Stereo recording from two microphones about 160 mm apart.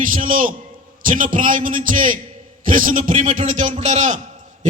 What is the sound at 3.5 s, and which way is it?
Speech, 45° right (ahead or behind).